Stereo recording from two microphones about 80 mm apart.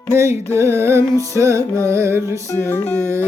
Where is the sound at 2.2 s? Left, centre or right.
Left.